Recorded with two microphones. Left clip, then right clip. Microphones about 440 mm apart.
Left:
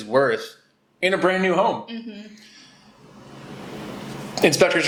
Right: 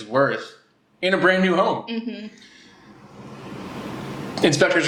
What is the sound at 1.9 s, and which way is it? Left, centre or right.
Speech, right.